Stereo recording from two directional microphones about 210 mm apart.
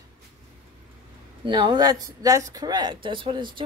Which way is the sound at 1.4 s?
20° right (ahead or behind).